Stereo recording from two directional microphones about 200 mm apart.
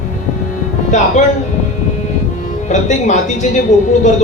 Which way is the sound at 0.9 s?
35° left (ahead or behind).